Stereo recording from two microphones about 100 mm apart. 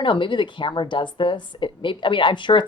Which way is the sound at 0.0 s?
55° left (ahead or behind).